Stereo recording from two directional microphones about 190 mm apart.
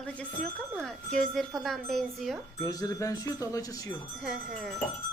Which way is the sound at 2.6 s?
20° left (ahead or behind).